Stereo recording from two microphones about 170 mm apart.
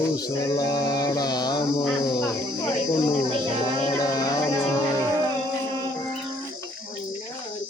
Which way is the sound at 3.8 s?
20° left (ahead or behind).